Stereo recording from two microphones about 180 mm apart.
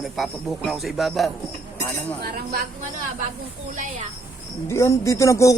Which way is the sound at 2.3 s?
55° right (ahead or behind).